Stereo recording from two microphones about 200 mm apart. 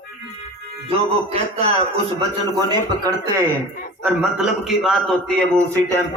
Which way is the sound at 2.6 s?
20° right (ahead or behind).